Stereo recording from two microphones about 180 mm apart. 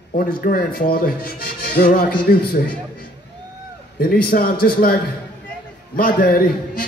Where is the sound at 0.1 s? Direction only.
50° left (ahead or behind).